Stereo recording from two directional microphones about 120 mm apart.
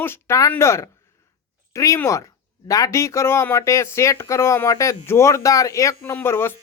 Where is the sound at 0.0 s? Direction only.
20° left (ahead or behind).